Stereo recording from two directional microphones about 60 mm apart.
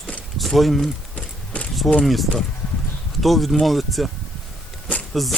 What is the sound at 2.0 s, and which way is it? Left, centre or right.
Speech, centre.